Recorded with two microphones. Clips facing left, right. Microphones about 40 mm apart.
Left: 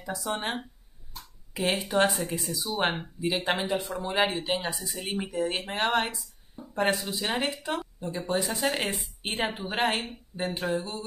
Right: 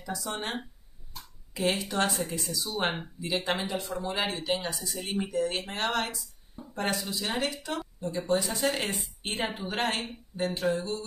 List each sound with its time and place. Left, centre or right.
0.0 s speech: centre